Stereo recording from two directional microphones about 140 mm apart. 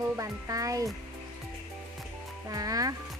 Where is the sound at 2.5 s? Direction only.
25° right (ahead or behind).